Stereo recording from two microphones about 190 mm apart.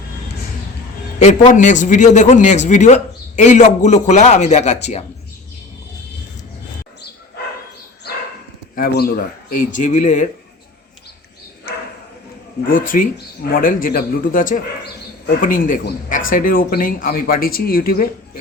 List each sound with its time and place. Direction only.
1.2 s a man's voice: 40° left (ahead or behind)
8.7 s speech: 50° left (ahead or behind)
12.6 s speech: 45° left (ahead or behind)